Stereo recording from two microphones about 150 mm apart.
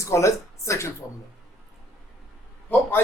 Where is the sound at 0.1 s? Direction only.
20° left (ahead or behind).